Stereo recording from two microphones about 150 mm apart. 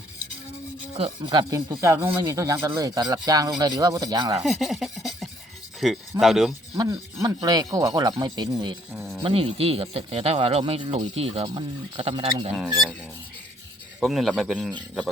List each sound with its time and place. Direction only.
0.9 s speech: 35° right (ahead or behind)
4.4 s a sound: centre (ahead or behind)
5.8 s speech: centre (ahead or behind)
6.7 s speech: 25° right (ahead or behind)
8.9 s a sound: centre (ahead or behind)
9.2 s speech: 40° right (ahead or behind)
12.5 s speech: 5° left (ahead or behind)
14.0 s speech: centre (ahead or behind)